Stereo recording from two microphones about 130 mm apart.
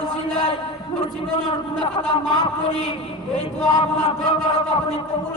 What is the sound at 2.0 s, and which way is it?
Speech, 40° left (ahead or behind).